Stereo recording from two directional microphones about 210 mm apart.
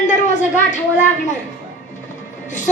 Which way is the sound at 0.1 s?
35° left (ahead or behind).